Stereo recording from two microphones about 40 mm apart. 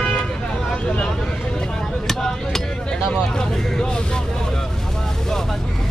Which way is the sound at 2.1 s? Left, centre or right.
Centre.